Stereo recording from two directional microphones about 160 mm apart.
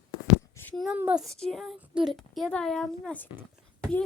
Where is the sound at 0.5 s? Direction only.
10° left (ahead or behind).